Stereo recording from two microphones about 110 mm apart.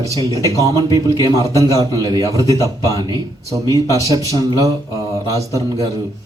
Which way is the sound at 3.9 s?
30° right (ahead or behind).